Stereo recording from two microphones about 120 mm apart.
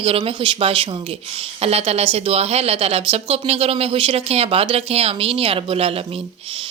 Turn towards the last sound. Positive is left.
turn(degrees=-55)  # may be behind; listen again after turning